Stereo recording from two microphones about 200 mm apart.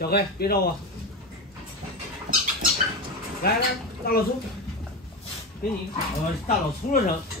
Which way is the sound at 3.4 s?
50° left (ahead or behind).